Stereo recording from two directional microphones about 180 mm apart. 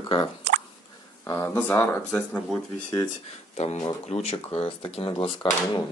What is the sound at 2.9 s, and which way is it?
Speech, 25° left (ahead or behind).